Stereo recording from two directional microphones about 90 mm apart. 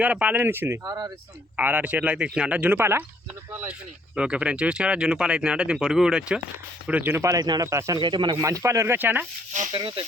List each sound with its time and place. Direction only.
0.0 s speech: 15° right (ahead or behind)
0.9 s speech: 50° right (ahead or behind)
1.5 s speech: 15° right (ahead or behind)
3.7 s speech: 10° right (ahead or behind)
7.1 s speech: 35° right (ahead or behind)
7.7 s speech: 35° right (ahead or behind)
8.0 s speech: 60° right (ahead or behind)
8.4 s speech: 35° right (ahead or behind)
9.0 s speech: 20° right (ahead or behind)
9.7 s speech: 65° right (ahead or behind)